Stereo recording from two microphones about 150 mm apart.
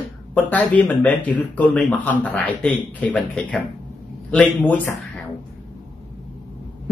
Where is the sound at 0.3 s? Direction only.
10° left (ahead or behind).